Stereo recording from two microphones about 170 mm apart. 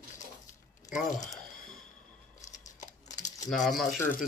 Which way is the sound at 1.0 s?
45° left (ahead or behind).